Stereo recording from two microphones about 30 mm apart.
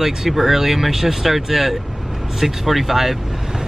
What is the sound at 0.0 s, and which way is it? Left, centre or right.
Speech, centre.